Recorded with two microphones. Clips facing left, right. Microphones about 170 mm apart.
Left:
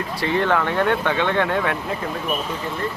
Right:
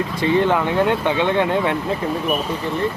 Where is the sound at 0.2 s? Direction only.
15° right (ahead or behind).